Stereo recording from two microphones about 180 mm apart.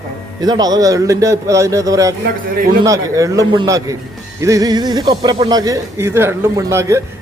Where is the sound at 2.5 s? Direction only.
50° right (ahead or behind).